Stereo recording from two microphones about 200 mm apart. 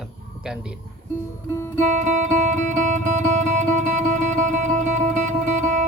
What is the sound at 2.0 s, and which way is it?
Music, 40° right (ahead or behind).